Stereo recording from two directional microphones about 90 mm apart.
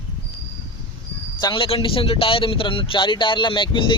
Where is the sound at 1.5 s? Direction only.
75° left (ahead or behind).